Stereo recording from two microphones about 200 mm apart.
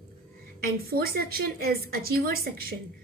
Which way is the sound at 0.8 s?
50° right (ahead or behind).